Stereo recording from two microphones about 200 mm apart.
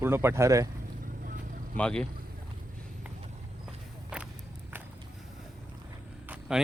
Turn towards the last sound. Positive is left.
turn(degrees=-5)  # may be behind; listen again after turning